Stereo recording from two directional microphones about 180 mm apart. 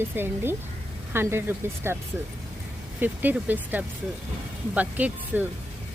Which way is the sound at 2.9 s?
10° right (ahead or behind).